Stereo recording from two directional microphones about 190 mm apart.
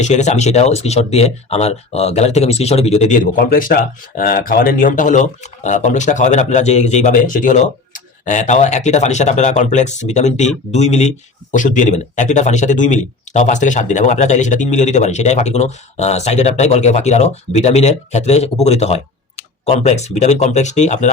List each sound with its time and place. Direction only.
0.0 s speech: 40° left (ahead or behind)